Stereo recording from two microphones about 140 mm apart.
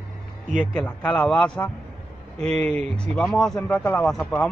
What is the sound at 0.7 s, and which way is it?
Speech, 10° left (ahead or behind).